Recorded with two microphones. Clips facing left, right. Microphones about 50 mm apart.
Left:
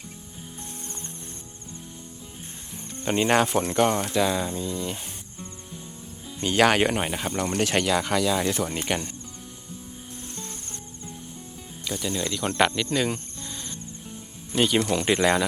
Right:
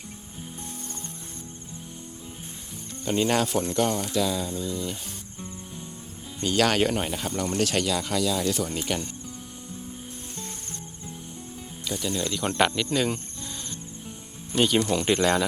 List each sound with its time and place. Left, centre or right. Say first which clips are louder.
3.0 s speech: left 2 dB; left
6.4 s speech: left 2 dB; left
7.8 s speech: left 3 dB; left
8.9 s speech: left 2 dB; left
11.9 s speech: even; centre